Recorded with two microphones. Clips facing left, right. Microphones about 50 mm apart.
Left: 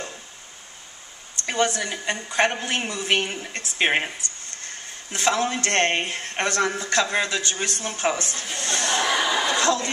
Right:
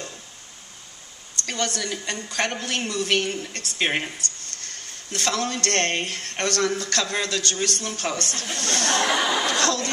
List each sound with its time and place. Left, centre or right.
1.4 s speech: centre
8.8 s chuckle: right
9.1 s chuckle: centre